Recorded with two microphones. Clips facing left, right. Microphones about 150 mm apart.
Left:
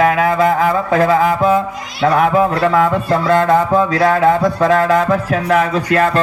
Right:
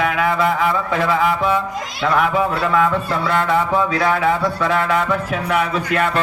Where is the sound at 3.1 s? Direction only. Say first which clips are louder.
Left 6 dB; 40° left (ahead or behind).